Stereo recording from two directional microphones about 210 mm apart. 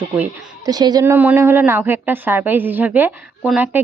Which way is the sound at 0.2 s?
20° right (ahead or behind).